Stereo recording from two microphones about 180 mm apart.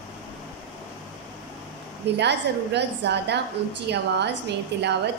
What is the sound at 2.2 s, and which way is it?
Speech, 70° right (ahead or behind).